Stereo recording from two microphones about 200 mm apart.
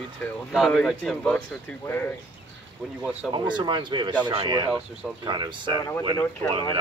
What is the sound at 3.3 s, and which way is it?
Speech, 20° right (ahead or behind).